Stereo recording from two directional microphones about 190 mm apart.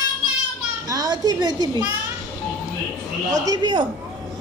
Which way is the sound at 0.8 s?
20° right (ahead or behind).